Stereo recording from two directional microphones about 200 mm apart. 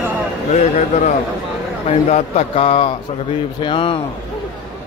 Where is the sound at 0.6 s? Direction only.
35° left (ahead or behind).